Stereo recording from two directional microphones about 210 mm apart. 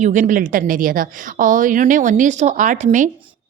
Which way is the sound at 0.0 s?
35° right (ahead or behind).